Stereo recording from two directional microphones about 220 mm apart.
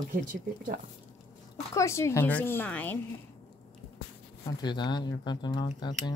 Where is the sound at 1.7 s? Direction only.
15° left (ahead or behind).